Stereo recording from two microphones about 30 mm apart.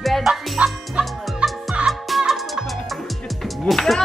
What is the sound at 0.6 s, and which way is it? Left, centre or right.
Music, right.